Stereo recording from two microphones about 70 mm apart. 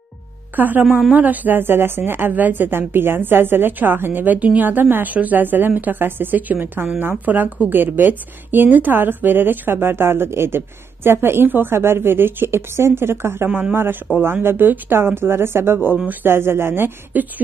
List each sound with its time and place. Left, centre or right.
0.6 s a woman's voice: right